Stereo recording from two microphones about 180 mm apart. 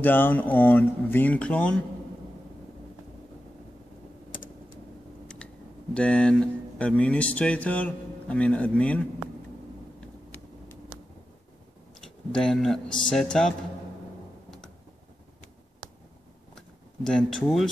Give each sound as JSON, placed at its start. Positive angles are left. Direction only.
{"t": 0.0, "sound": "speech", "side_deg": 10}
{"t": 4.3, "sound": "typing", "side_deg": 50}
{"t": 5.9, "sound": "speech", "side_deg": 5}
{"t": 12.0, "sound": "speech", "side_deg": 5}
{"t": 16.5, "sound": "a sound", "side_deg": 5}